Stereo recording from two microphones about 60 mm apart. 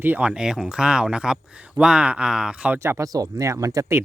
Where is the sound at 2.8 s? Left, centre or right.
Right.